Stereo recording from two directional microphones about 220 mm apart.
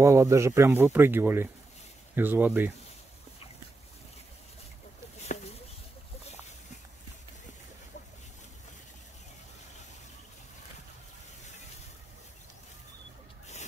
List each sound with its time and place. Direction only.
0.0 s speech: 15° right (ahead or behind)